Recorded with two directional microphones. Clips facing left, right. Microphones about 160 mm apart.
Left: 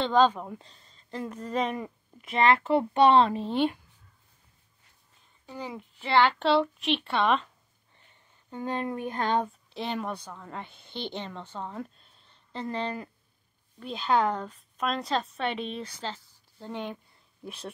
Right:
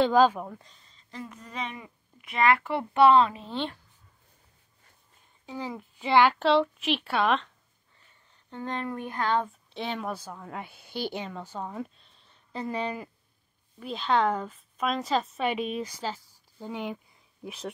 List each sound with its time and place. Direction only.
0.0 s a woman's voice: 10° right (ahead or behind)
1.3 s speech: 45° left (ahead or behind)
2.3 s speech: 25° left (ahead or behind)
3.5 s speech: 10° left (ahead or behind)
5.8 s speech: 15° right (ahead or behind)
6.4 s speech: centre (ahead or behind)
8.5 s speech: 10° left (ahead or behind)
9.8 s a woman's voice: centre (ahead or behind)